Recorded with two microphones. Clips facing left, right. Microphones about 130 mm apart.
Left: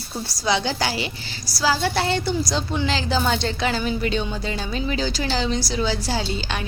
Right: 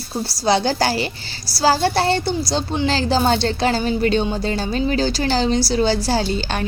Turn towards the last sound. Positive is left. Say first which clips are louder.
# right 6 dB
turn(degrees=-35)  # may be behind; listen again after turning